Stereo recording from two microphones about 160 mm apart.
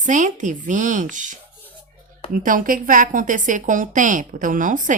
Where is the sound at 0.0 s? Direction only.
50° right (ahead or behind).